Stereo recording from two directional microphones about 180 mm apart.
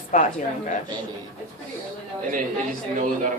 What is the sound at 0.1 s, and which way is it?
Speech, 45° left (ahead or behind).